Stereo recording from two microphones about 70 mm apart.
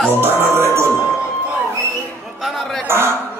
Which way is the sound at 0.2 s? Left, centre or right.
Right.